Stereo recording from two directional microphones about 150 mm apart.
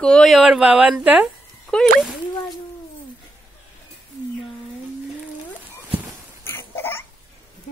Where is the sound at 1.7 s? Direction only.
5° left (ahead or behind).